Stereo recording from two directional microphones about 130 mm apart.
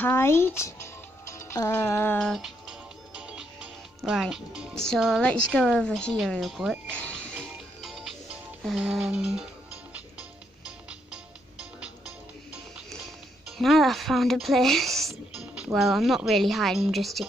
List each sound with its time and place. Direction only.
0.0 s speech: 20° left (ahead or behind)
2.1 s speech: centre (ahead or behind)
3.2 s music: 10° right (ahead or behind)
4.0 s speech: 5° right (ahead or behind)
6.9 s speech: 10° left (ahead or behind)
7.3 s music: centre (ahead or behind)
10.9 s music: 5° right (ahead or behind)
13.5 s speech: centre (ahead or behind)